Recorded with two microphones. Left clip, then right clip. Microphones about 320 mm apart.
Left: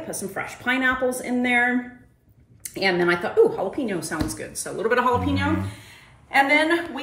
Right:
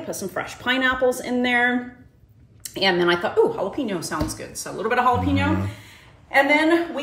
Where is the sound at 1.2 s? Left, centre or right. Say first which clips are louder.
Right 1 dB; centre.